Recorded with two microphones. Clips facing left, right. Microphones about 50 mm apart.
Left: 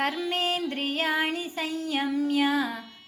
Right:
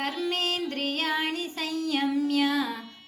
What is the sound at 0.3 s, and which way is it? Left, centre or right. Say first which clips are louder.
Music: left 1 dB; centre.